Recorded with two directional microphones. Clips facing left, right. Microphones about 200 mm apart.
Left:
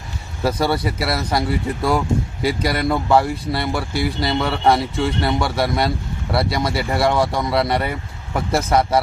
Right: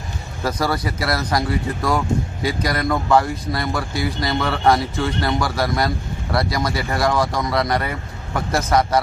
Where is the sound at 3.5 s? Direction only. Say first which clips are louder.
Left 1 dB; 30° left (ahead or behind).